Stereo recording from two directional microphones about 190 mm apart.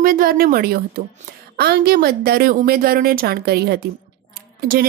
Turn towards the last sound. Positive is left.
turn(degrees=-50)  # may be behind; listen again after turning